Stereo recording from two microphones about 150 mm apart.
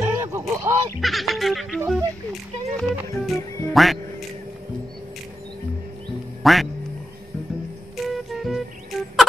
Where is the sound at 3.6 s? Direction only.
Centre (ahead or behind).